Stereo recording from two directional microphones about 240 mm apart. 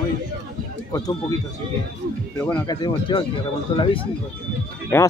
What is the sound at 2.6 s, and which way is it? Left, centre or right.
Speech, centre.